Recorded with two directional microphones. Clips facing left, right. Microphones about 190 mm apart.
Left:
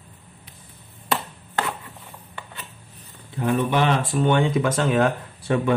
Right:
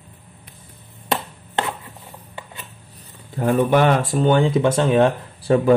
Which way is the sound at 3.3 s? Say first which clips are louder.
Right 5 dB; 45° right (ahead or behind).